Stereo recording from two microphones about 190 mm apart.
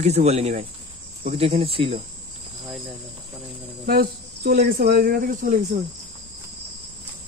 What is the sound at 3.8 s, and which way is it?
Speech, 55° right (ahead or behind).